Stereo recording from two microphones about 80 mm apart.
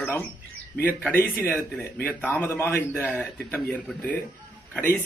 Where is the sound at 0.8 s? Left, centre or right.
Left.